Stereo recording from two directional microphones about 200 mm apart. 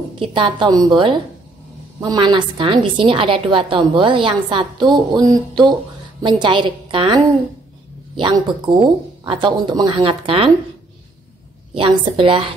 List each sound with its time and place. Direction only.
0.3 s a woman's voice: 25° right (ahead or behind)
8.2 s a woman's voice: 20° right (ahead or behind)
11.7 s a woman's voice: 25° right (ahead or behind)